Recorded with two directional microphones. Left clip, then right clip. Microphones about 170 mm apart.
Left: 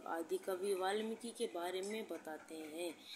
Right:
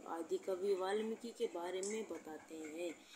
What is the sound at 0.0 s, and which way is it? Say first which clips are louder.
A woman's voice: left 1 dB; 10° left (ahead or behind).